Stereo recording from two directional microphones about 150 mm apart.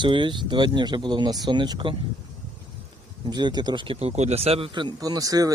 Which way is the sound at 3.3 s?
30° right (ahead or behind).